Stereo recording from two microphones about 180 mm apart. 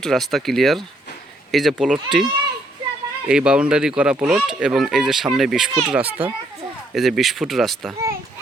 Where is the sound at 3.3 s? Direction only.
5° right (ahead or behind).